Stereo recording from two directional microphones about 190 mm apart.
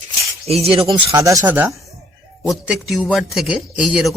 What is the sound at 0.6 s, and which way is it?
Speech, 30° right (ahead or behind).